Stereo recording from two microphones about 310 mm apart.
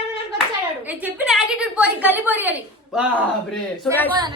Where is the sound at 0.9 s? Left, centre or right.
Centre.